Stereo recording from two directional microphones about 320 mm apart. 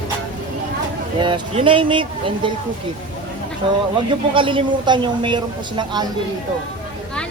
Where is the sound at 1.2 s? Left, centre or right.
Centre.